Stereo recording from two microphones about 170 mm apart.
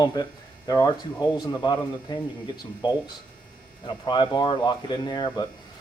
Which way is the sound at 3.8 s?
25° left (ahead or behind).